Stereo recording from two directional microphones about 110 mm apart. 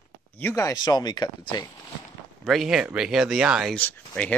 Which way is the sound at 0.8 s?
40° left (ahead or behind).